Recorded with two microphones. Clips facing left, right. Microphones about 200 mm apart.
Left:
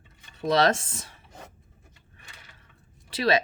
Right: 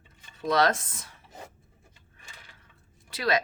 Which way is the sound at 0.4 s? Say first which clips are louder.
Left 2 dB; 25° left (ahead or behind).